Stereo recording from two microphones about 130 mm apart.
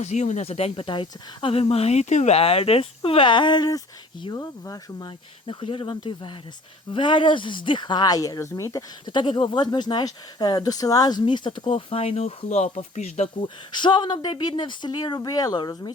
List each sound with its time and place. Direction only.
0.0 s speech: 60° left (ahead or behind)
13.4 s speech: 35° left (ahead or behind)